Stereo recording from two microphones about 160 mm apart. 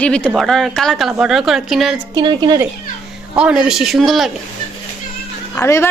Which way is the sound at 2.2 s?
25° right (ahead or behind).